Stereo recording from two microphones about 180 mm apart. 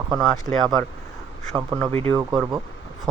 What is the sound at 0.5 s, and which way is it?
Speech, centre (ahead or behind).